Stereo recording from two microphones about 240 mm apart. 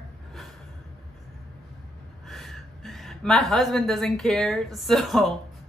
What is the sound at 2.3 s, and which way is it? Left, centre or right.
A woman's voice, centre.